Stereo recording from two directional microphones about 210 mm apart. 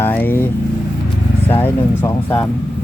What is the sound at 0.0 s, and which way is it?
Vehicle, 10° left (ahead or behind).